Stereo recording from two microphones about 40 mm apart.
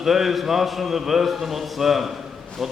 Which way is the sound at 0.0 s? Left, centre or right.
Centre.